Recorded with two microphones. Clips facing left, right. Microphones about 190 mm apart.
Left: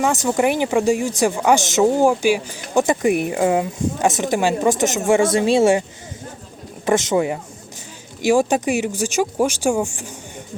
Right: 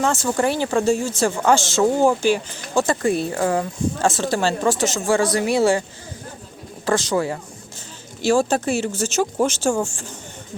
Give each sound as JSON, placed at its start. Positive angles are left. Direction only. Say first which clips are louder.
{"t": 0.0, "sound": "speech", "louder": "left 2 dB", "side_deg": 15}
{"t": 6.8, "sound": "speech", "louder": "left 3 dB", "side_deg": 20}